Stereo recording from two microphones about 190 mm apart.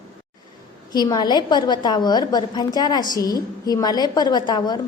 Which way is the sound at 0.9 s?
20° left (ahead or behind).